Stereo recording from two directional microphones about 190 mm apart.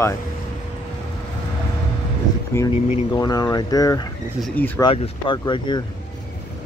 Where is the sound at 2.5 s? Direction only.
20° left (ahead or behind).